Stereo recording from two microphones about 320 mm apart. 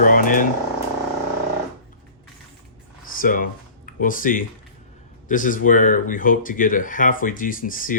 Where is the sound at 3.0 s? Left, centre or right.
Left.